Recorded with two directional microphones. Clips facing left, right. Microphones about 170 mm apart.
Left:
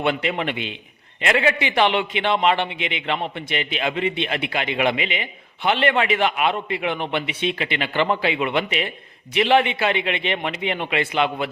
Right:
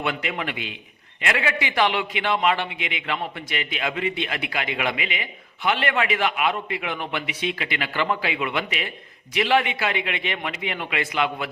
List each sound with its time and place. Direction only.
0.0 s a man's voice: 30° left (ahead or behind)